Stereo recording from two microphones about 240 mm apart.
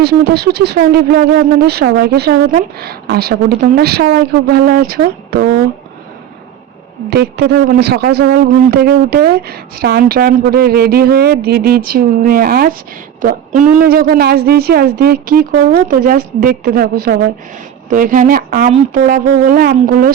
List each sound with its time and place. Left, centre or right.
0.0 s a man's voice: right
7.1 s a man's voice: right